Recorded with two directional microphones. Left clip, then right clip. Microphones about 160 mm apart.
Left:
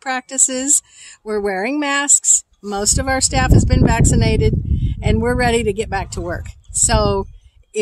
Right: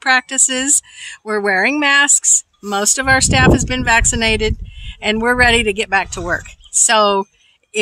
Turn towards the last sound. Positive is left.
turn(degrees=-10)  # may be behind; listen again after turning